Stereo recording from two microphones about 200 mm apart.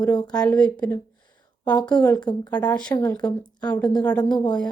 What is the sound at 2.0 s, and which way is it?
A woman's voice, 5° left (ahead or behind).